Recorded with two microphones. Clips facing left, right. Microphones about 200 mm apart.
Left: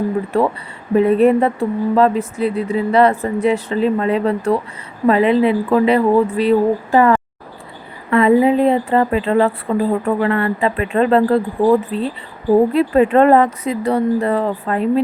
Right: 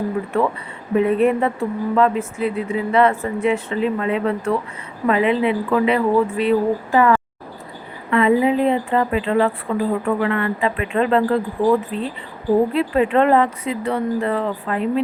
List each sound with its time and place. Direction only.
0.3 s speech: 35° left (ahead or behind)